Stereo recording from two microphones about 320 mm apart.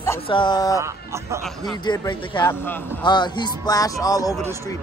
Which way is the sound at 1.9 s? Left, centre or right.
Centre.